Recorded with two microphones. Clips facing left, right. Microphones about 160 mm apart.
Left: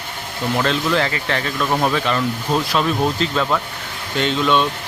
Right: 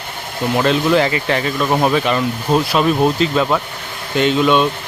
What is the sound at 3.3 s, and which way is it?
Speech, 15° right (ahead or behind).